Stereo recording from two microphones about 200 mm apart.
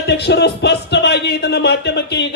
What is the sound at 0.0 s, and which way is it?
Speech, 55° left (ahead or behind).